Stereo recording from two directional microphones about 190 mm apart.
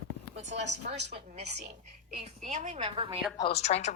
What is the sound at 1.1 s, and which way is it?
A woman's voice, 35° right (ahead or behind).